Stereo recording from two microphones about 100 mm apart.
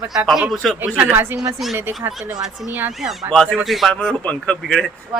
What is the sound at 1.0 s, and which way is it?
A woman's voice, 20° right (ahead or behind).